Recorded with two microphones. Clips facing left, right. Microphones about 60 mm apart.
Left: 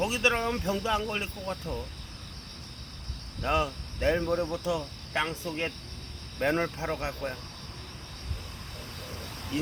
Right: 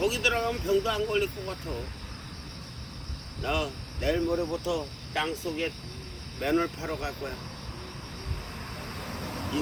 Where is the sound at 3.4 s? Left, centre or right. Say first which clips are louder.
Left 2 dB; left.